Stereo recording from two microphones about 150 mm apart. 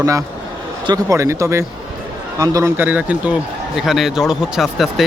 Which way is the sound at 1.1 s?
20° right (ahead or behind).